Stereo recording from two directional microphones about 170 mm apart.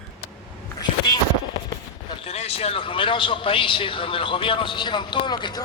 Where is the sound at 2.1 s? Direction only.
35° left (ahead or behind).